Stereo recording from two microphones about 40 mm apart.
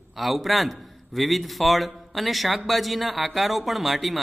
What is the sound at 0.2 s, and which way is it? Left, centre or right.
A man's voice, centre.